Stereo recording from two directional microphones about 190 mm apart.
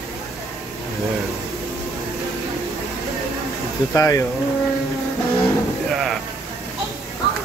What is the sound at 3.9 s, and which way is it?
Speech, 15° left (ahead or behind).